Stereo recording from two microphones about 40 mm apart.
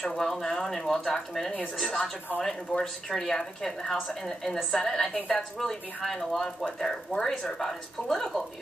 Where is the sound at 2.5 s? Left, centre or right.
Left.